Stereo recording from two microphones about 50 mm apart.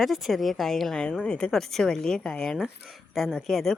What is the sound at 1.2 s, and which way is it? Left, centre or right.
Speech, left.